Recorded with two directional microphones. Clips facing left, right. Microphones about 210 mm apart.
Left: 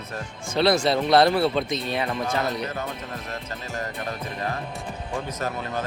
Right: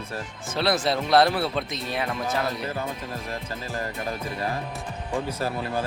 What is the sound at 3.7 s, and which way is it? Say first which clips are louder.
Speech: even; 30° right (ahead or behind).